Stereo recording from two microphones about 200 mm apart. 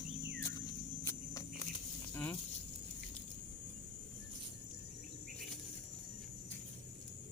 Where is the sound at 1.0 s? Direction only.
15° left (ahead or behind).